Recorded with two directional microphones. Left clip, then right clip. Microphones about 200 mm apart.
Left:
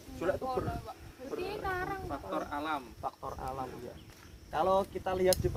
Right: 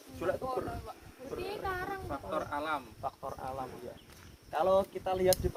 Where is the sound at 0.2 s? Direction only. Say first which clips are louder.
Left 1 dB; 10° left (ahead or behind).